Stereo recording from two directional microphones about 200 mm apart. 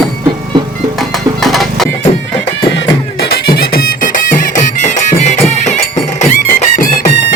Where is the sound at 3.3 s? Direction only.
50° left (ahead or behind).